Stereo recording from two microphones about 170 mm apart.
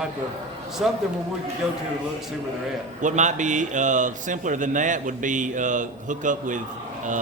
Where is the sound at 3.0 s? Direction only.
45° right (ahead or behind).